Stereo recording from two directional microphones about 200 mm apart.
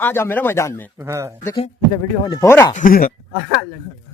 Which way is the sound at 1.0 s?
15° right (ahead or behind).